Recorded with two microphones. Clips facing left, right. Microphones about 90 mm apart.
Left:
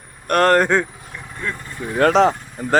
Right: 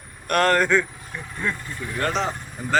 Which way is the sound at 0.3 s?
45° left (ahead or behind).